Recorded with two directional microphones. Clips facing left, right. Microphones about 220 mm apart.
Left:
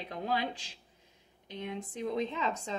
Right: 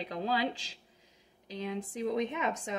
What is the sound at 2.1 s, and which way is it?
Speech, 20° right (ahead or behind).